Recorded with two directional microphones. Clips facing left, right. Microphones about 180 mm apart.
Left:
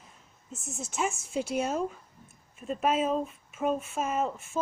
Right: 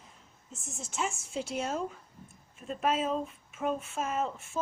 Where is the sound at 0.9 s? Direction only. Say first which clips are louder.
Left 4 dB; 15° left (ahead or behind).